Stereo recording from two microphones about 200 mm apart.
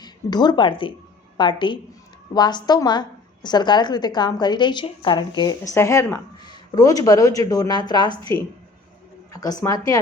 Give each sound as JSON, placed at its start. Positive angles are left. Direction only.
{"t": 0.0, "sound": "a woman's voice", "side_deg": 20}
{"t": 9.3, "sound": "a woman's voice", "side_deg": 20}